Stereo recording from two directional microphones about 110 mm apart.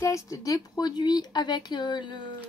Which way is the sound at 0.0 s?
30° left (ahead or behind).